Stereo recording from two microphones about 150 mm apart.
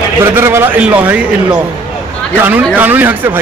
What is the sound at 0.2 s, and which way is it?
Speech, 15° right (ahead or behind).